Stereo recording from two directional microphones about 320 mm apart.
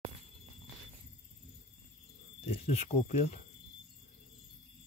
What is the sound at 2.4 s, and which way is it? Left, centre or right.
Speech, centre.